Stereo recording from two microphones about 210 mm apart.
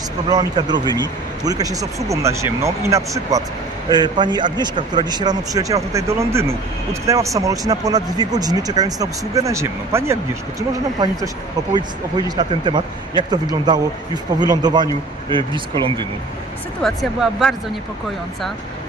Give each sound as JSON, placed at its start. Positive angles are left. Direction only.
{"t": 0.3, "sound": "speech", "side_deg": -20}
{"t": 16.8, "sound": "speech", "side_deg": 0}